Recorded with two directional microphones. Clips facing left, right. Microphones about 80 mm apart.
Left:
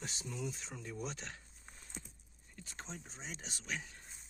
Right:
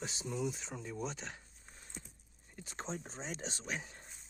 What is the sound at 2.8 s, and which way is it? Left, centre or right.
Speech, right.